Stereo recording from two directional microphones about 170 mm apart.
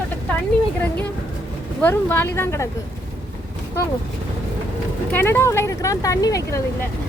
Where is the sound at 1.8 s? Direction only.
10° left (ahead or behind).